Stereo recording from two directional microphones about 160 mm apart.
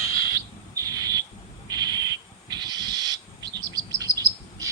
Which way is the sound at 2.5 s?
25° right (ahead or behind).